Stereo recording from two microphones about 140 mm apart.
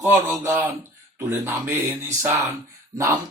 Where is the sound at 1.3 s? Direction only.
15° right (ahead or behind).